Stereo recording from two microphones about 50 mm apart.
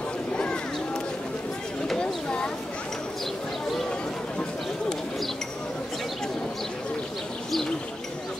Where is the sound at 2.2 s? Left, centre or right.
Left.